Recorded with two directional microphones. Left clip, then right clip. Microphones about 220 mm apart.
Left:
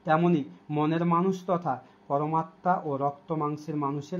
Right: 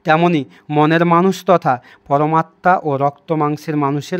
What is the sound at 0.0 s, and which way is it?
Speech, 45° right (ahead or behind).